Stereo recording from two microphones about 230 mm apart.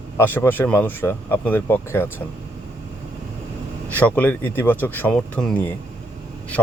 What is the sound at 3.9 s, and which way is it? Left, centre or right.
Speech, centre.